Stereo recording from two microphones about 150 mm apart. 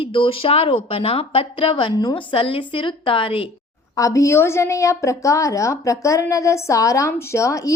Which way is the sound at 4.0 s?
20° left (ahead or behind).